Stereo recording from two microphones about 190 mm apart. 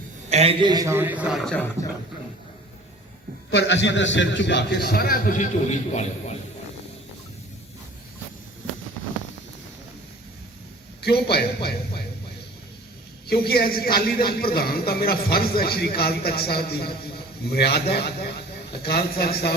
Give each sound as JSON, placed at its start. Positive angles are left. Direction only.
{"t": 0.3, "sound": "a man's voice", "side_deg": -30}
{"t": 3.5, "sound": "a man's voice", "side_deg": 70}
{"t": 11.0, "sound": "a man's voice", "side_deg": 55}
{"t": 13.2, "sound": "a man's voice", "side_deg": 55}